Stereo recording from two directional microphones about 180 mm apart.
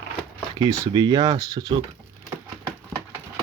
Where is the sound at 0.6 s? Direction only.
20° right (ahead or behind).